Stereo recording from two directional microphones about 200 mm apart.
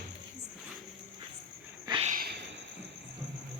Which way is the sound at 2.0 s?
45° right (ahead or behind).